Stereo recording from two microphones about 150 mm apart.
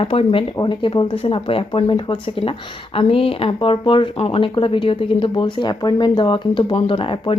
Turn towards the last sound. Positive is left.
turn(degrees=35)  # may be behind; listen again after turning